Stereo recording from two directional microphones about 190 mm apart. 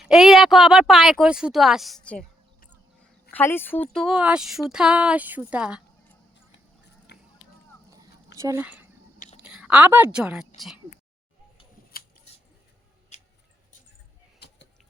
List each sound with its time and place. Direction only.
0.0 s speech: centre (ahead or behind)
3.3 s speech: 10° left (ahead or behind)
3.9 s speech: centre (ahead or behind)
7.1 s chop: 60° left (ahead or behind)
8.4 s speech: 15° right (ahead or behind)
9.1 s chewing: 45° left (ahead or behind)
9.4 s a woman's voice: 5° right (ahead or behind)
13.1 s tick-tock: 35° left (ahead or behind)
14.3 s vehicle: 60° left (ahead or behind)